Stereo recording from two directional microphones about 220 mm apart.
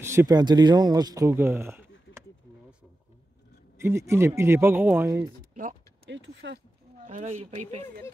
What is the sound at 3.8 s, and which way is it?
Speech, 10° right (ahead or behind).